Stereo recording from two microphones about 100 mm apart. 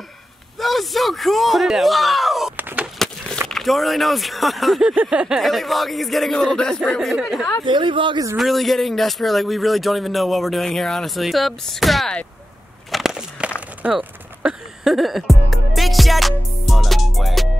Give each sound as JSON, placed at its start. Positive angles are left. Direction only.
{"t": 0.6, "sound": "speech", "side_deg": 0}
{"t": 2.5, "sound": "a sound", "side_deg": -15}
{"t": 3.4, "sound": "speech", "side_deg": 0}
{"t": 5.4, "sound": "speech", "side_deg": 0}
{"t": 7.6, "sound": "speech", "side_deg": -55}
{"t": 8.4, "sound": "speech", "side_deg": 0}
{"t": 12.9, "sound": "walk", "side_deg": -5}
{"t": 13.8, "sound": "music", "side_deg": -10}